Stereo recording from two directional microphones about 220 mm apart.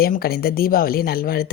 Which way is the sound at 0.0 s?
45° left (ahead or behind).